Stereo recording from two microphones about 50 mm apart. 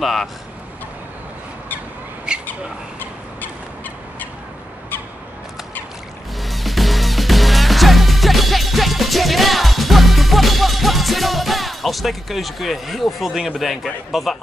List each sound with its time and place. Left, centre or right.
0.0 s speech: centre
2.3 s a sound: centre
6.4 s music: centre
14.1 s speech: centre